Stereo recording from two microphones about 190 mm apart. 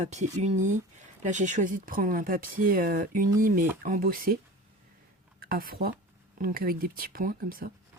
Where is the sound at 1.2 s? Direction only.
40° right (ahead or behind).